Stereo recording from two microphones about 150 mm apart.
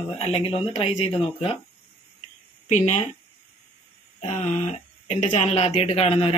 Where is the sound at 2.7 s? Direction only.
55° left (ahead or behind).